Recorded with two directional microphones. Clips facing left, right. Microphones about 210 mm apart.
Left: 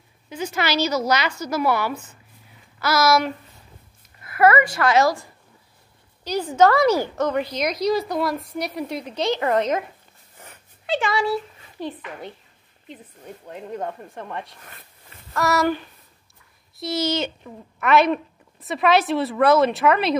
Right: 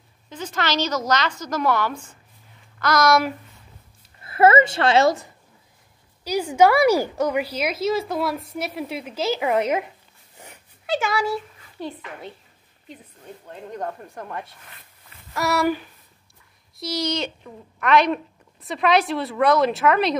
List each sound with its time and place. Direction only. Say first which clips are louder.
0.3 s a woman's voice: left 2 dB; 10° left (ahead or behind)
4.2 s a woman's voice: right 1 dB; 25° right (ahead or behind)
6.2 s a woman's voice: even; 10° right (ahead or behind)
10.3 s dog: right 1 dB; 15° right (ahead or behind)
10.9 s a woman's voice: left 1 dB; centre (ahead or behind)
13.7 s a woman's voice: even; centre (ahead or behind)
16.8 s a woman's voice: left 2 dB; centre (ahead or behind)